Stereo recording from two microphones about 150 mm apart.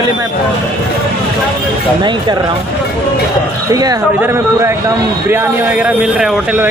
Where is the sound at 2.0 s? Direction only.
30° right (ahead or behind).